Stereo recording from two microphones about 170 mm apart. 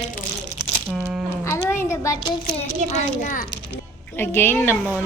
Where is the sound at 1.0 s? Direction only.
10° right (ahead or behind).